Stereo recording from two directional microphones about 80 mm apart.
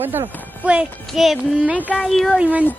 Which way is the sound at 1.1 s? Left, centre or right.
Centre.